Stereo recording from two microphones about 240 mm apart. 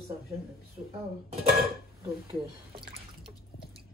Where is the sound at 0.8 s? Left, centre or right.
Right.